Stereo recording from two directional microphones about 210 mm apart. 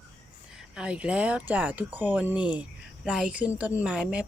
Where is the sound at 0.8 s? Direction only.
5° right (ahead or behind).